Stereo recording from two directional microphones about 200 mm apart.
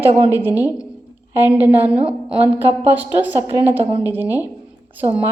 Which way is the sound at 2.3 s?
10° right (ahead or behind).